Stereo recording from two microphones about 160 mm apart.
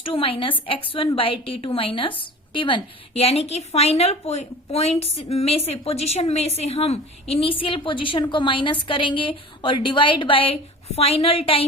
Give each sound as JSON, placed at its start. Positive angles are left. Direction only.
{"t": 0.0, "sound": "speech", "side_deg": 35}